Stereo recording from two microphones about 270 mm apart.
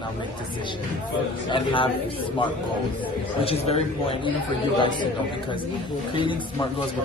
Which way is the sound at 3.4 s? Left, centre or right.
Left.